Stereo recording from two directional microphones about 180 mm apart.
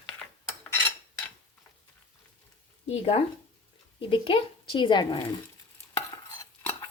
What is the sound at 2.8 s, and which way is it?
Speech, 30° left (ahead or behind).